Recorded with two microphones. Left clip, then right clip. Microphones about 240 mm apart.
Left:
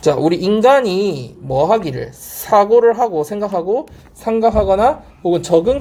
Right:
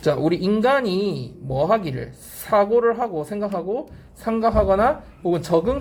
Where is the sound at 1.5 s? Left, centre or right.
Left.